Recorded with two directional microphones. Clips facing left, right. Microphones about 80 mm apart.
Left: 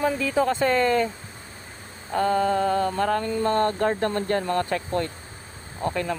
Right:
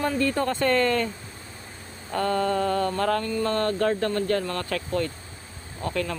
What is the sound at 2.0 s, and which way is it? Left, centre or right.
Mantra, centre.